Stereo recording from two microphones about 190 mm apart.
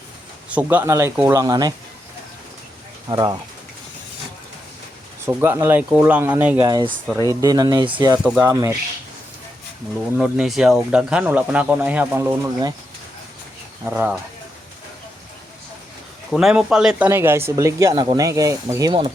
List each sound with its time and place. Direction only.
0.5 s speech: 10° right (ahead or behind)
3.1 s speech: 20° right (ahead or behind)
5.2 s speech: 10° right (ahead or behind)
6.7 s speech: 20° right (ahead or behind)
8.2 s speech: 10° right (ahead or behind)
10.2 s speech: 5° right (ahead or behind)
13.8 s speech: 10° right (ahead or behind)
16.3 s speech: centre (ahead or behind); by 19.1 s 25° right (ahead or behind)